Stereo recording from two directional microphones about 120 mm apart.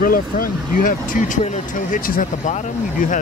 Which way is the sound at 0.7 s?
90° left.